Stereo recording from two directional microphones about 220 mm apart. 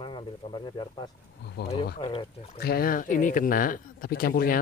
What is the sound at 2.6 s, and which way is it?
Speech, 45° left (ahead or behind).